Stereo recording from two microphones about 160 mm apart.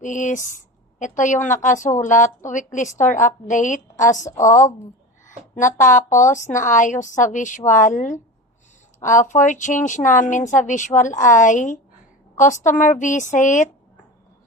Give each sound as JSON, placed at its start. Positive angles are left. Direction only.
{"t": 0.0, "sound": "speech", "side_deg": 50}